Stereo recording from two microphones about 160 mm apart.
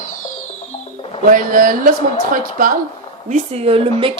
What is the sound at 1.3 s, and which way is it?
Speech, 60° right (ahead or behind).